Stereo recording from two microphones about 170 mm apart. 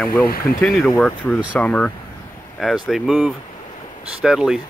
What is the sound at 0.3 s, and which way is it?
Speech, 60° left (ahead or behind).